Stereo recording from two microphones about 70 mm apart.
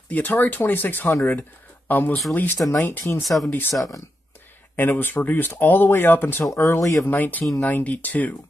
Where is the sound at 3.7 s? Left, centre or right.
Left.